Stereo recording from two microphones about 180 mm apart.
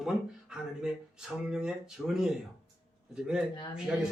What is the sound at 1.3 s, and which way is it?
Speech, 5° right (ahead or behind).